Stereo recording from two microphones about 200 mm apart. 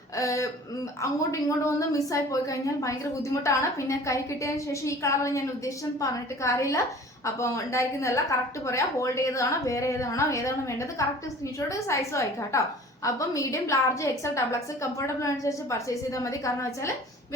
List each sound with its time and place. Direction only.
0.2 s a woman's voice: 15° left (ahead or behind)